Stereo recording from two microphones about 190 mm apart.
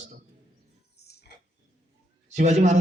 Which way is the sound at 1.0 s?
60° left (ahead or behind).